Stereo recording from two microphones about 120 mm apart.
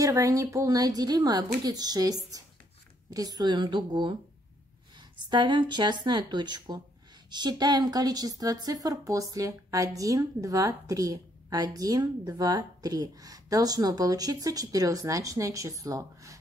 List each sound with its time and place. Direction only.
0.0 s speech: 30° right (ahead or behind)
5.1 s a woman's voice: 40° right (ahead or behind)